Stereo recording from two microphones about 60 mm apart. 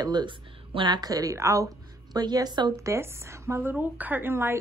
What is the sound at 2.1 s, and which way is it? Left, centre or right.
Speech, right.